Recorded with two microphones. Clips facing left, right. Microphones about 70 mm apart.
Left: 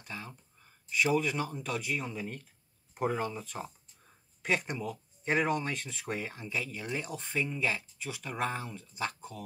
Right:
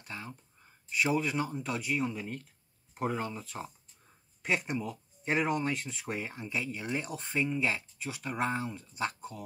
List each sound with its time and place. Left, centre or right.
0.1 s speech: centre
4.5 s speech: centre
4.7 s a sound: centre
5.3 s speech: centre